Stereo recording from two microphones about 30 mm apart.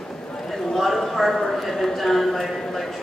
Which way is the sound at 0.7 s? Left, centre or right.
Centre.